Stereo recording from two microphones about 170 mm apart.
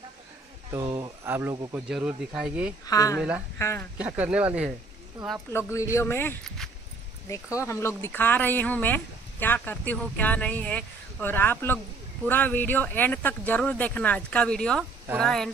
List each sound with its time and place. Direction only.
0.7 s speech: 20° right (ahead or behind)
2.9 s a woman's voice: 20° left (ahead or behind)
3.2 s speech: 5° right (ahead or behind)
3.5 s speech: 15° left (ahead or behind)
4.0 s speech: 10° right (ahead or behind)
5.5 s speech: 15° left (ahead or behind)